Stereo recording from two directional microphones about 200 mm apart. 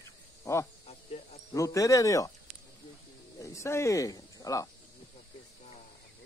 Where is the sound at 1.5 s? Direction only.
15° left (ahead or behind).